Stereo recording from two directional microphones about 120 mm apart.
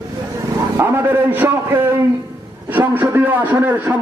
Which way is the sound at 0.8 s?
20° right (ahead or behind).